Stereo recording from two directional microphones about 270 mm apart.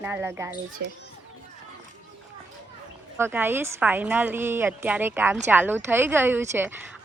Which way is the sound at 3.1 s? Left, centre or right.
Centre.